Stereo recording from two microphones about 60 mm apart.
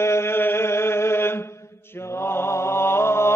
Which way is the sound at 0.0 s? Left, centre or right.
Left.